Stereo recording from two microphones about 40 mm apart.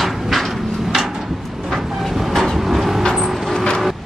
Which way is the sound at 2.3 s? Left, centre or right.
Centre.